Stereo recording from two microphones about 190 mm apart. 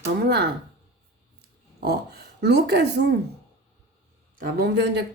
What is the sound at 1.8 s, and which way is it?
Speech, 55° right (ahead or behind).